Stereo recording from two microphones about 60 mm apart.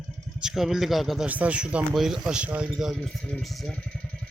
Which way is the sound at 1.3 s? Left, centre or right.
Right.